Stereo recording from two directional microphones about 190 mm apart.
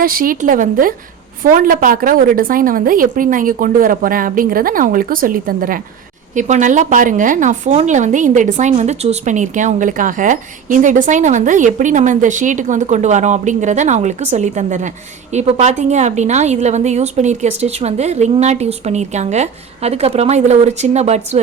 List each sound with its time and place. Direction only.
0.0 s a woman's voice: 50° right (ahead or behind)